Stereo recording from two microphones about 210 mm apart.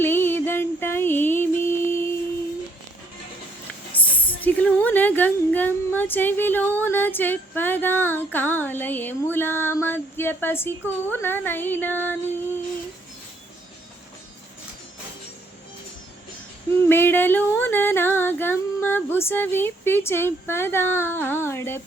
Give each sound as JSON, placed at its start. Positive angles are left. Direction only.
{"t": 0.0, "sound": "music", "side_deg": 10}
{"t": 3.9, "sound": "a woman's voice", "side_deg": 10}
{"t": 16.9, "sound": "a woman's voice", "side_deg": 10}